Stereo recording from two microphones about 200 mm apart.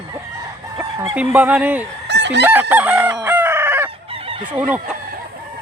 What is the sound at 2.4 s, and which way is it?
Chicken, 10° right (ahead or behind).